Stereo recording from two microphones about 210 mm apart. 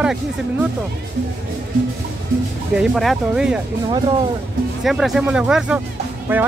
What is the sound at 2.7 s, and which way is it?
Speech, centre (ahead or behind).